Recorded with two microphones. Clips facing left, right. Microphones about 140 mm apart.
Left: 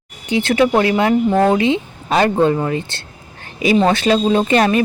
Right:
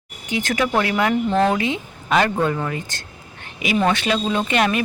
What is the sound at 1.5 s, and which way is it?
Speech, 25° left (ahead or behind).